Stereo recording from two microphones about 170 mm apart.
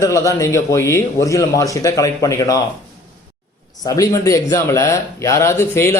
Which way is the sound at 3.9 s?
20° left (ahead or behind).